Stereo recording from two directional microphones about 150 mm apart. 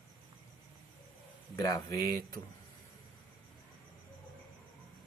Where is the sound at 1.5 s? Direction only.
25° left (ahead or behind).